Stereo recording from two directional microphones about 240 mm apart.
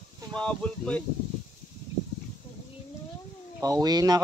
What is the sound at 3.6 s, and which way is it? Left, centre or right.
Speech, centre.